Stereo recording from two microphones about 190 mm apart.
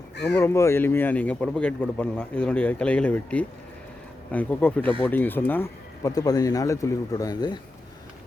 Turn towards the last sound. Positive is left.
turn(degrees=20)  # may be behind; listen again after turning